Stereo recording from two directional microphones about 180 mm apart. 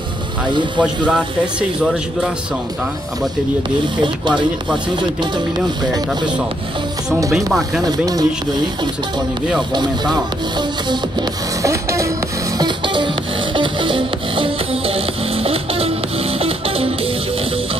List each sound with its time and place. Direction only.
0.7 s music: 5° right (ahead or behind)
1.8 s speech: 5° right (ahead or behind)
7.8 s speech: 20° right (ahead or behind)
10.9 s music: 20° right (ahead or behind)